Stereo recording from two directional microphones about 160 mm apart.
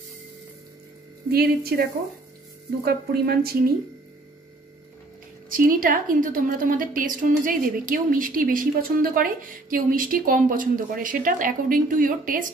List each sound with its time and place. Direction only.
1.3 s speech: 75° right (ahead or behind)
5.5 s a woman's voice: 60° right (ahead or behind)